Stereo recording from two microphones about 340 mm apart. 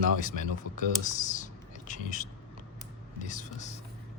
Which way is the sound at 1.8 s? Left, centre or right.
Left.